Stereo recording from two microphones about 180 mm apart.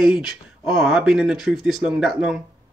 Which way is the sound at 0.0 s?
5° right (ahead or behind).